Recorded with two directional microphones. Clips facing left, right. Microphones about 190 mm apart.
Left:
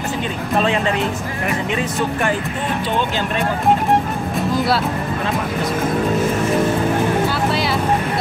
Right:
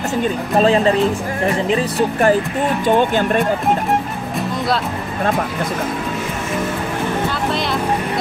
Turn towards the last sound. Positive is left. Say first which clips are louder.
# left 1 dB
turn(degrees=5)  # may be behind; listen again after turning